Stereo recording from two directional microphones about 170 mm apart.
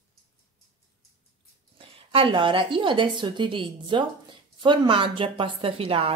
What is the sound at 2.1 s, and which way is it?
A woman's voice, 30° right (ahead or behind).